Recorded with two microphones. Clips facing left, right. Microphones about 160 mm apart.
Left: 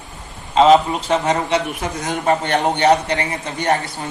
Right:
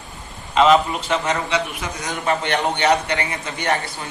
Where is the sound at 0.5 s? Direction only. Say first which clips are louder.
Left 3 dB; 30° left (ahead or behind).